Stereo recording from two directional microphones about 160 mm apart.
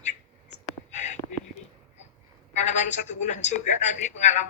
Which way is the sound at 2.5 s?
45° left (ahead or behind).